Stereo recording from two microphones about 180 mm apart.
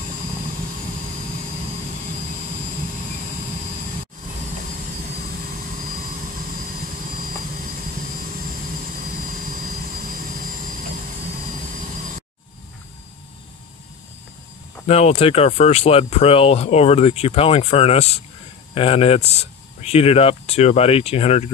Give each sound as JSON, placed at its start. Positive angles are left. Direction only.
{"t": 14.9, "sound": "speech", "side_deg": 35}